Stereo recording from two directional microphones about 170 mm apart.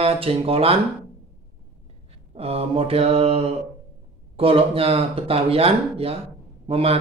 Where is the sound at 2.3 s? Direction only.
35° right (ahead or behind).